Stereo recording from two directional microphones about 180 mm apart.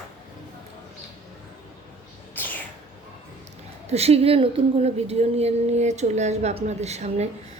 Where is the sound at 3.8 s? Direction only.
35° right (ahead or behind).